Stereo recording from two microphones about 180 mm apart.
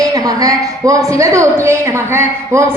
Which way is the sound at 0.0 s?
20° right (ahead or behind).